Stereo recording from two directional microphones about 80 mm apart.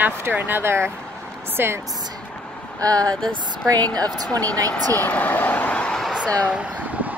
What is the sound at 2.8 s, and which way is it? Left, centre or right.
Speech, right.